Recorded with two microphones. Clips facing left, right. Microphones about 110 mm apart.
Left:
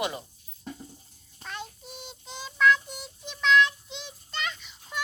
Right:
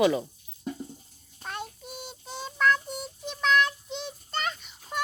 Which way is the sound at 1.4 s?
45° right (ahead or behind).